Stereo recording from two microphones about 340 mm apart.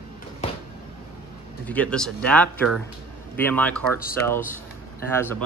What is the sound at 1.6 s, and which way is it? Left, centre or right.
Speech, centre.